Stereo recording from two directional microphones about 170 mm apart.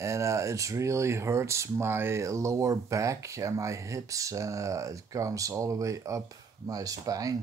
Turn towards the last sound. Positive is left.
turn(degrees=-20)  # may be behind; listen again after turning